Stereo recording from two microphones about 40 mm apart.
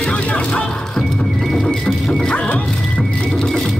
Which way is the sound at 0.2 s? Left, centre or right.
Left.